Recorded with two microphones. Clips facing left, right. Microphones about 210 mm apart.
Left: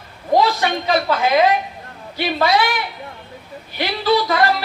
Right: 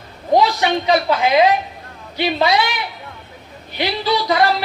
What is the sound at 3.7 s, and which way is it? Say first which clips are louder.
Speech: left 2 dB; 20° right (ahead or behind).